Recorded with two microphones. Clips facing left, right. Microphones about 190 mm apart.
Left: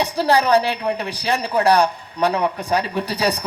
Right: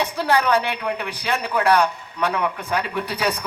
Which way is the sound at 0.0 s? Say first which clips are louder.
Left 3 dB; 35° left (ahead or behind).